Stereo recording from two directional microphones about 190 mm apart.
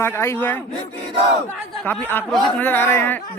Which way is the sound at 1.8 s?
10° left (ahead or behind).